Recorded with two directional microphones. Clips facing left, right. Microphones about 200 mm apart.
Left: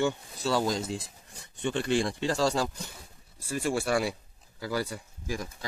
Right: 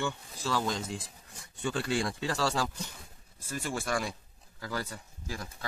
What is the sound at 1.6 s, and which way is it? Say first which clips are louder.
Speech: left 4 dB; 25° left (ahead or behind).